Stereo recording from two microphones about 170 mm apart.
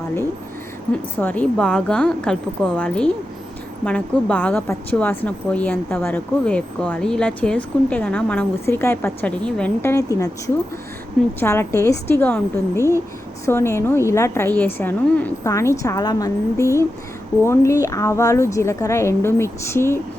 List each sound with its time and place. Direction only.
1.2 s a woman's voice: 10° left (ahead or behind)